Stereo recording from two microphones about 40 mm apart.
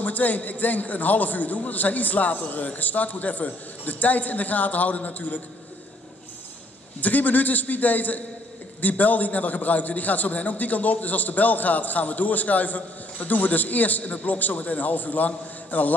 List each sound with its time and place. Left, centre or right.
0.0 s a man's voice: left
7.0 s a man's voice: left